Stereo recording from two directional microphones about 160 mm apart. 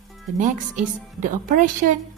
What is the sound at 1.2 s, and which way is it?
Speech, 55° right (ahead or behind).